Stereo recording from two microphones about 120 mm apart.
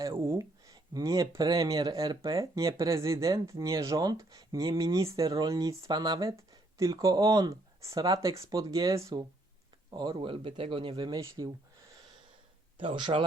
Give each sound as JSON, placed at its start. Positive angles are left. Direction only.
{"t": 0.0, "sound": "speech", "side_deg": -25}
{"t": 12.7, "sound": "speech", "side_deg": -45}